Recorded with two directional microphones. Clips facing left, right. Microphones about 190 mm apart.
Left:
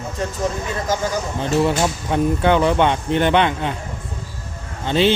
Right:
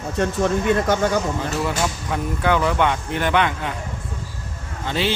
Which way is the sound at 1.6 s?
25° left (ahead or behind).